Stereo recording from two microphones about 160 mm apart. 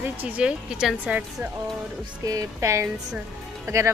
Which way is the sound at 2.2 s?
20° right (ahead or behind).